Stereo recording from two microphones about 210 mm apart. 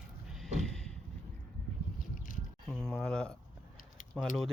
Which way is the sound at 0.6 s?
5° left (ahead or behind).